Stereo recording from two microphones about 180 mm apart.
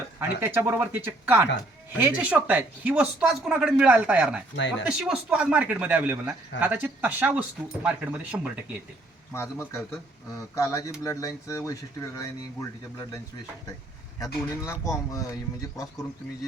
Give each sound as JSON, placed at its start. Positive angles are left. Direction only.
{"t": 0.2, "sound": "speech", "side_deg": -10}
{"t": 9.3, "sound": "speech", "side_deg": 15}
{"t": 14.5, "sound": "speech", "side_deg": 15}